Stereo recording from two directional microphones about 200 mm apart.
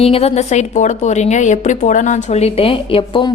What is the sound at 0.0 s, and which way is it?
A woman's voice, 30° left (ahead or behind).